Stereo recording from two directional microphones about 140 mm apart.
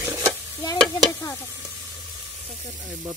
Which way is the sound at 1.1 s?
25° left (ahead or behind).